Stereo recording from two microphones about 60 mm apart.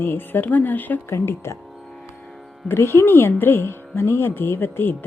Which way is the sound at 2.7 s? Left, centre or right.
Left.